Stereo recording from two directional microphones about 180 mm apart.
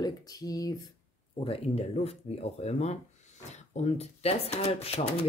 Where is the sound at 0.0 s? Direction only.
20° left (ahead or behind).